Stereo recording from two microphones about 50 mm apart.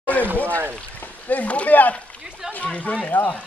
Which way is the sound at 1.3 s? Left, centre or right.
Left.